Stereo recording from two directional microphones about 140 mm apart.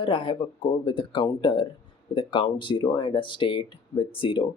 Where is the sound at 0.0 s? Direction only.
40° left (ahead or behind).